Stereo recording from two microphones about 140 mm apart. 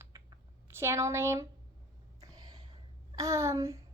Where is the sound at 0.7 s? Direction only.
20° right (ahead or behind).